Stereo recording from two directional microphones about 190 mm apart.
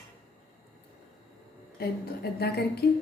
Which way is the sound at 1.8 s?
55° left (ahead or behind).